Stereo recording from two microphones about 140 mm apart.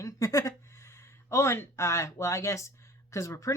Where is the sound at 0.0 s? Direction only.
25° left (ahead or behind).